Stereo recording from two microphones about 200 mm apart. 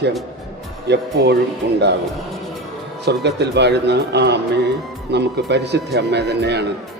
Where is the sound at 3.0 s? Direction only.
60° right (ahead or behind).